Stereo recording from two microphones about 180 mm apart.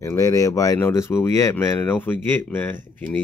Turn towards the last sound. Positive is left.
turn(degrees=10)  # may be behind; listen again after turning